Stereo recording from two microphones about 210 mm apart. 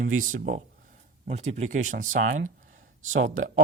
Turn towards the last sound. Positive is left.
turn(degrees=-40)  # may be behind; listen again after turning